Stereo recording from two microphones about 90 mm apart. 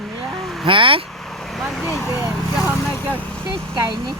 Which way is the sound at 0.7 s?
80° right.